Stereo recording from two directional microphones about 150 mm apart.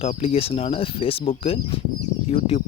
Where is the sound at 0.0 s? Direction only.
40° left (ahead or behind).